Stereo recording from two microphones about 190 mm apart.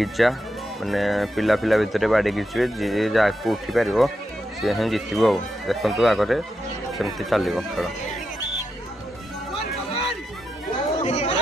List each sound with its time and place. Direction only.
0.0 s speech: centre (ahead or behind)
11.0 s chatter: 35° left (ahead or behind)